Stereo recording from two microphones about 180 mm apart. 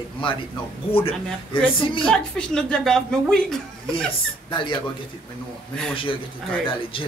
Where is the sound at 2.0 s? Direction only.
5° left (ahead or behind).